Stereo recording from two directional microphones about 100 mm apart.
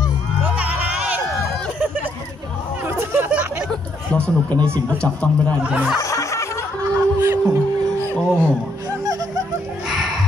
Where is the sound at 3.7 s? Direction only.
10° left (ahead or behind).